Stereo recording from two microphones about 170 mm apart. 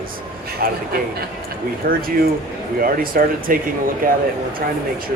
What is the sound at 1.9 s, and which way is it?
Speech, 55° right (ahead or behind).